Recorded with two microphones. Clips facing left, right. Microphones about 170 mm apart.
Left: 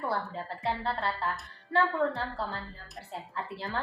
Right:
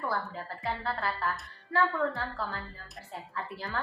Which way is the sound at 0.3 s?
25° left (ahead or behind).